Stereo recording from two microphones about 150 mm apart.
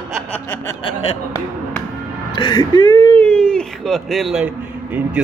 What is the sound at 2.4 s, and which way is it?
Speech, 30° left (ahead or behind).